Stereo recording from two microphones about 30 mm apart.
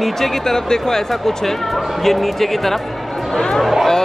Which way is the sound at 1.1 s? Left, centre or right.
Centre.